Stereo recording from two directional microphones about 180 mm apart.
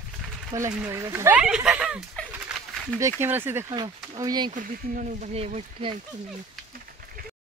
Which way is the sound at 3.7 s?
20° right (ahead or behind).